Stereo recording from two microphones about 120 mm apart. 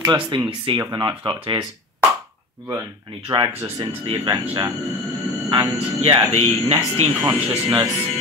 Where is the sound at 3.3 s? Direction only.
45° right (ahead or behind).